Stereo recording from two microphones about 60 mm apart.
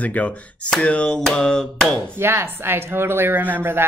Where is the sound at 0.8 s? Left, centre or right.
Centre.